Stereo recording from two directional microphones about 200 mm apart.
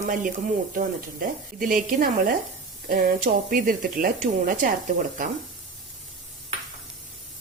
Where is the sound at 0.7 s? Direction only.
45° right (ahead or behind).